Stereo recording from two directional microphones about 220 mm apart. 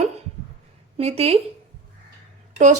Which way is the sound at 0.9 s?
25° right (ahead or behind).